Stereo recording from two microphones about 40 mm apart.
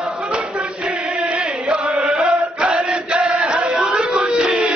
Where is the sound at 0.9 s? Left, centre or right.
Right.